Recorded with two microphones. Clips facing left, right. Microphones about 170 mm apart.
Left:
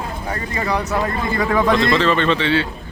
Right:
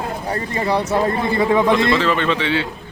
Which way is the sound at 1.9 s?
10° right (ahead or behind).